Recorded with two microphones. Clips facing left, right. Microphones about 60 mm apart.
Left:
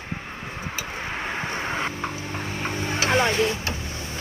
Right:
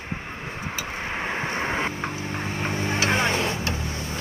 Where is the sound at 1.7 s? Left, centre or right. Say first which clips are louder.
Right 1 dB; centre.